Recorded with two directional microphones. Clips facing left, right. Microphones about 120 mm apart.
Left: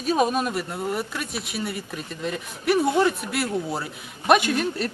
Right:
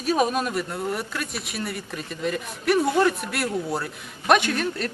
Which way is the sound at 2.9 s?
20° left (ahead or behind).